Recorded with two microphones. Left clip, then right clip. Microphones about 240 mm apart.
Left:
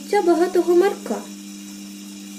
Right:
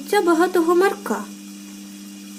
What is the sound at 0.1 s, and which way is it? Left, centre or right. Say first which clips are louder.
Speech: even; right.